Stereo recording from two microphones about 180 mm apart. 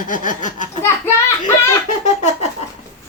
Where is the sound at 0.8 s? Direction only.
15° left (ahead or behind).